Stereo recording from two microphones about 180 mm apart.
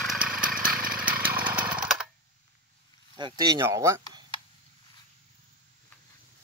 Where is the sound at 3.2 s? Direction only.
25° right (ahead or behind).